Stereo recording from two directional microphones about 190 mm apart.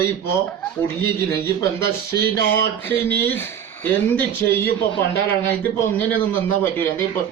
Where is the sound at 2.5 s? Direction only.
10° left (ahead or behind).